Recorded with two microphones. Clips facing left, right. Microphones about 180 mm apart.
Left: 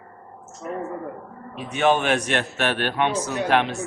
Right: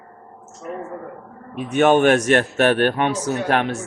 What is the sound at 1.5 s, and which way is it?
A man's voice, 50° right (ahead or behind).